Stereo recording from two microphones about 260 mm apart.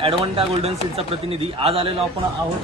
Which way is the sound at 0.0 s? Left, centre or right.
Right.